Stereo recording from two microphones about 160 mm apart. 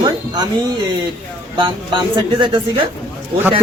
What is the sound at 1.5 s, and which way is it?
Speech, 30° right (ahead or behind).